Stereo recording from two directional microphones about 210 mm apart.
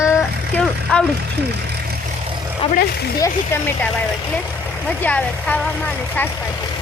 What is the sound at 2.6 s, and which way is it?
Speech, 25° left (ahead or behind).